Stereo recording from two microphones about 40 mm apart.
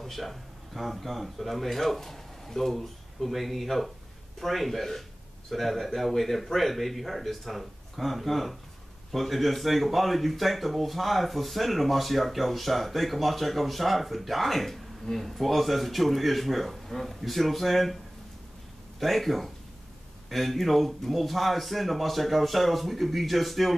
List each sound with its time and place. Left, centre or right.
0.0 s a man's voice: centre
18.9 s speech: centre